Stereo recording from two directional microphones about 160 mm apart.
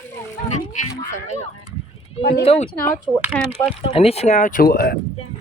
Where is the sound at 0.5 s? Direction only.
45° left (ahead or behind).